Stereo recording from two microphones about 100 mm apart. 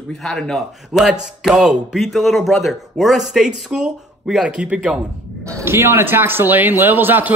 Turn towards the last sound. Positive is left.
turn(degrees=-20)  # may be behind; listen again after turning